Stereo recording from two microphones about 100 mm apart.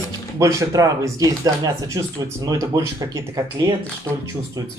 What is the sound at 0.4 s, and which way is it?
Speech, 30° right (ahead or behind).